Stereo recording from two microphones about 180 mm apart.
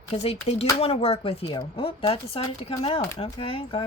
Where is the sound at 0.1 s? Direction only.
35° left (ahead or behind).